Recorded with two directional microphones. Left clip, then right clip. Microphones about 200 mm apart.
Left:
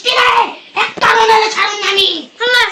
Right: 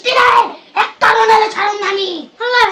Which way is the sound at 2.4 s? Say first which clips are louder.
Left 1 dB; 60° right (ahead or behind).